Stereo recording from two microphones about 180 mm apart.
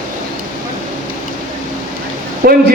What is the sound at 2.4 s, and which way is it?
Speech, 55° right (ahead or behind).